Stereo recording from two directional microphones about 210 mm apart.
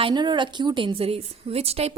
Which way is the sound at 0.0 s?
20° right (ahead or behind).